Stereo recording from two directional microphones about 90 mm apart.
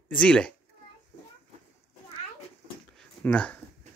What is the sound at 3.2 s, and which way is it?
Speech, 15° left (ahead or behind).